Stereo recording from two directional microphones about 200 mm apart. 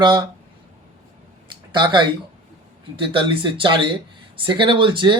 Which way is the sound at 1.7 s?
25° right (ahead or behind).